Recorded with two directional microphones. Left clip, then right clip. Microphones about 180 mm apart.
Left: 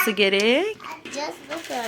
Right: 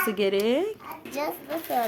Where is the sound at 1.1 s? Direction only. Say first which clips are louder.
Right 1 dB; 40° right (ahead or behind).